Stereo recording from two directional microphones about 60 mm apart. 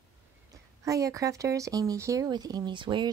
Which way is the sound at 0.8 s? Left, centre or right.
Right.